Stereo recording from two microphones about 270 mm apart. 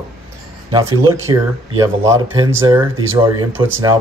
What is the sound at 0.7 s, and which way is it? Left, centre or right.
Speech, centre.